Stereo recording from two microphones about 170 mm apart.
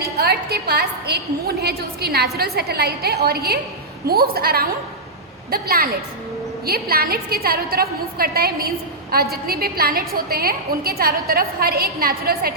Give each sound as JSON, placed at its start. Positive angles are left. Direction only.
{"t": 0.0, "sound": "a woman's voice", "side_deg": -65}